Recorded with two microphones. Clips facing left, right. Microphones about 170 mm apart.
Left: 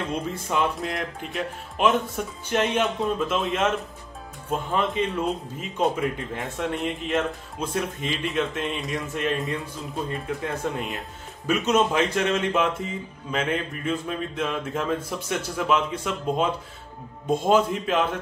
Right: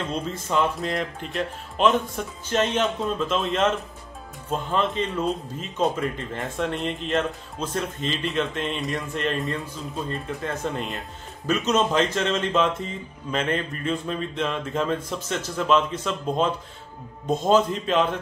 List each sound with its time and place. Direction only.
0.6 s speech: centre (ahead or behind)